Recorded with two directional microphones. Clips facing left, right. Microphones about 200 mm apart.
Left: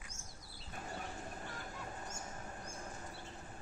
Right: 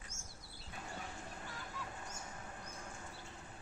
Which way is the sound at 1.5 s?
45° left (ahead or behind).